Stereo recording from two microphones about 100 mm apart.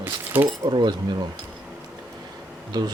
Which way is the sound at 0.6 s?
50° right (ahead or behind).